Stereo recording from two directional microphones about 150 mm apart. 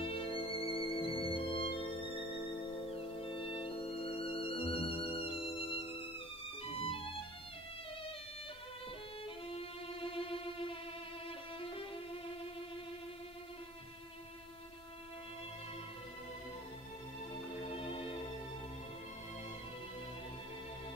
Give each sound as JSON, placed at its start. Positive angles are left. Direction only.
{"t": 0.0, "sound": "music", "side_deg": 35}
{"t": 2.9, "sound": "music", "side_deg": 40}
{"t": 9.6, "sound": "music", "side_deg": 35}
{"t": 11.2, "sound": "violin", "side_deg": 40}
{"t": 17.6, "sound": "organ", "side_deg": 35}